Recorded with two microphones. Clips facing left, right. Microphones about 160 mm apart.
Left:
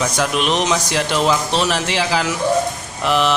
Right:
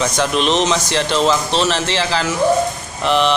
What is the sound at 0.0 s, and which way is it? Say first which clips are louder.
Speech: right 2 dB; 5° left (ahead or behind).